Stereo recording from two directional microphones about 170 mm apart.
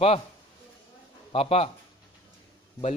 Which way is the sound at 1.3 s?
35° left (ahead or behind).